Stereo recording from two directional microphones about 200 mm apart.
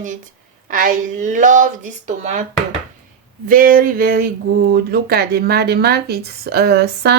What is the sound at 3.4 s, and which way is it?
Speech, 45° right (ahead or behind).